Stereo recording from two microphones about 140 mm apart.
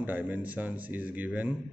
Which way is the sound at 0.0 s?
10° right (ahead or behind).